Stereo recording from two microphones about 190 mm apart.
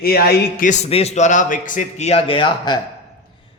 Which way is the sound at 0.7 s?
35° left (ahead or behind).